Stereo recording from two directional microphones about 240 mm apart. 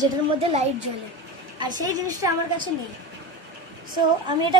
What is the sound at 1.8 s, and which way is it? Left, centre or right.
Speech, centre.